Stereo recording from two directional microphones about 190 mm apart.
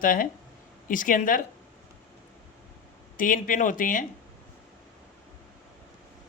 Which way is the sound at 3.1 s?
45° left (ahead or behind).